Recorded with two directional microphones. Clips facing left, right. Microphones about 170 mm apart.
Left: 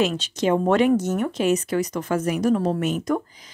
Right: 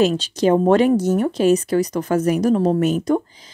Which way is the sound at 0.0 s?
35° right (ahead or behind).